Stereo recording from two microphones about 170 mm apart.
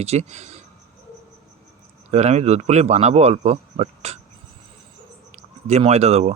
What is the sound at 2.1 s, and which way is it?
Speech, 40° right (ahead or behind).